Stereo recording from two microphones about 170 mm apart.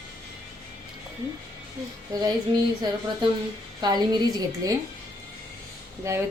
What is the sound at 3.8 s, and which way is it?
Speech, 25° right (ahead or behind).